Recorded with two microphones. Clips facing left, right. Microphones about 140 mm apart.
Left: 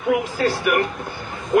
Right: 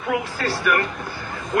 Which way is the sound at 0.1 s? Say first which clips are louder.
Left 4 dB; 20° left (ahead or behind).